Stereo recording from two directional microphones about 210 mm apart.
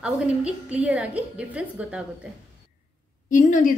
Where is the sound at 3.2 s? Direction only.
40° left (ahead or behind).